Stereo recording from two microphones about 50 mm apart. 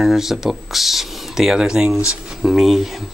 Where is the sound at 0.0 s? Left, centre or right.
Centre.